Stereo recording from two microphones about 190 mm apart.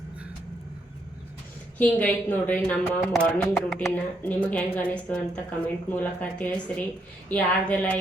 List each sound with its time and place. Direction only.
1.8 s speech: 10° left (ahead or behind)